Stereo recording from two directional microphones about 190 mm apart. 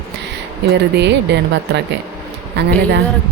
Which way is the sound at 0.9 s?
65° right (ahead or behind).